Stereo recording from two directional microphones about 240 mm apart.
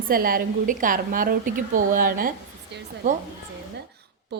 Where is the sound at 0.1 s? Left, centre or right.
Right.